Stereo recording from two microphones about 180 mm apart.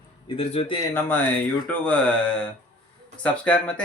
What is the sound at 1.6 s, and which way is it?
Speech, 10° left (ahead or behind).